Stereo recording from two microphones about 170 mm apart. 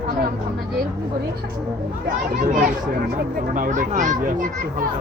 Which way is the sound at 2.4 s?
55° right (ahead or behind).